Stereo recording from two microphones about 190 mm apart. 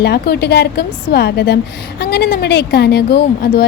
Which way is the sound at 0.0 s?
60° left (ahead or behind).